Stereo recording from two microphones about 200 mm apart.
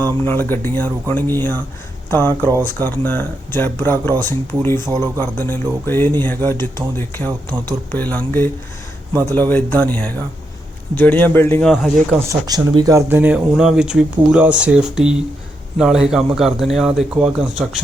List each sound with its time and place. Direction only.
0.0 s speech: 10° left (ahead or behind)
4.9 s speech: 15° right (ahead or behind)
5.2 s speech: 10° left (ahead or behind)
7.3 s speech: 20° right (ahead or behind)
7.9 s speech: 10° left (ahead or behind)
9.5 s speech: 10° left (ahead or behind)
11.7 s speech: centre (ahead or behind)
12.3 s speech: 20° right (ahead or behind)